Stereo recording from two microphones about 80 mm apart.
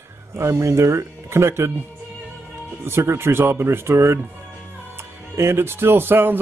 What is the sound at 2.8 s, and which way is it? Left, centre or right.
Speech, right.